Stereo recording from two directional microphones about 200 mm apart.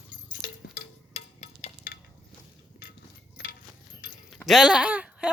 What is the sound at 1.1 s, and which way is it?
Music, 35° left (ahead or behind).